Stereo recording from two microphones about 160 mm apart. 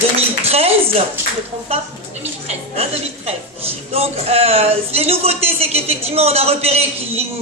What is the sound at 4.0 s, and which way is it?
A man's voice, 40° right (ahead or behind).